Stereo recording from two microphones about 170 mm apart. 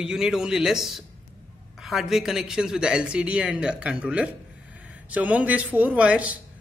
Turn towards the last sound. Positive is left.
turn(degrees=-5)  # may be behind; listen again after turning